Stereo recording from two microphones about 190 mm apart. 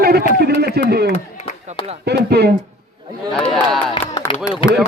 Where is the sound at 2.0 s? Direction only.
60° right (ahead or behind).